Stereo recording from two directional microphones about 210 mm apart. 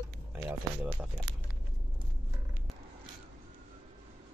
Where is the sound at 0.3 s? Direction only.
10° right (ahead or behind).